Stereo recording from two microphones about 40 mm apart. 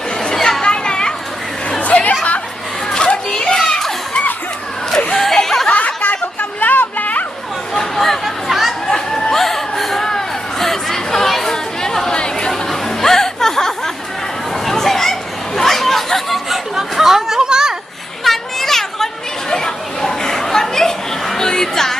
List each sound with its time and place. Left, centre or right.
0.3 s chatter: centre
0.6 s children playing: left
1.8 s chatter: left
2.9 s children playing: left
5.1 s a sound: centre
5.6 s chatter: left
7.7 s a sound: centre
8.2 s chatter: centre
8.9 s chatter: centre
12.5 s chatter: centre
16.9 s a sound: centre
18.2 s children playing: centre
19.5 s chatter: centre